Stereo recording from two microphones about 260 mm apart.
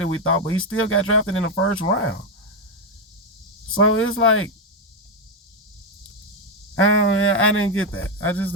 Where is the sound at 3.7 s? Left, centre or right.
Left.